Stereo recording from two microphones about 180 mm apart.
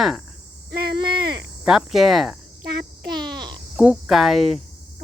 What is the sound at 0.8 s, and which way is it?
Cricket, 25° right (ahead or behind).